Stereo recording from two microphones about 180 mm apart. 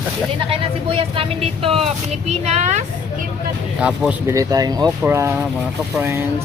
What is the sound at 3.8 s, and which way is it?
Speech, 5° right (ahead or behind).